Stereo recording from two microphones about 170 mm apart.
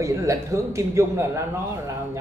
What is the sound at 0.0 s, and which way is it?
Speech, 15° right (ahead or behind).